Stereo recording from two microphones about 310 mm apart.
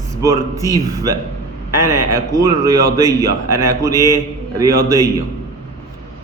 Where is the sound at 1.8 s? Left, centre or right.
Right.